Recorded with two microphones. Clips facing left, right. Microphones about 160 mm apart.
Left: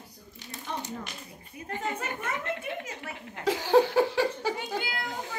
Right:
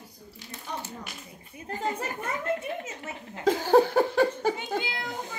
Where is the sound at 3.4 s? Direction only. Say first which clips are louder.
Right 2 dB; 45° right (ahead or behind).